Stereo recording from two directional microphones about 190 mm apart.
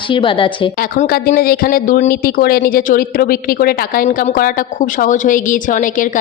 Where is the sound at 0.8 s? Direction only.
50° left (ahead or behind).